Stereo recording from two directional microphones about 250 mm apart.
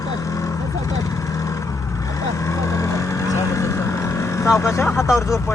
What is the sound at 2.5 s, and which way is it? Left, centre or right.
Vehicle, centre.